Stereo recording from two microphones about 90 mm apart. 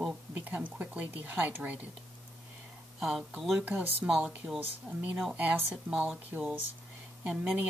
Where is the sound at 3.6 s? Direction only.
15° right (ahead or behind).